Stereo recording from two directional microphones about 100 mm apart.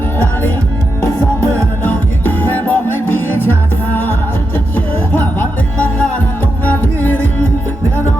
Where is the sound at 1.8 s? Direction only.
20° left (ahead or behind).